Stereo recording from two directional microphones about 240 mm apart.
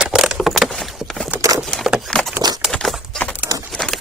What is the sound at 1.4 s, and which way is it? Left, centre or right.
Vehicle, centre.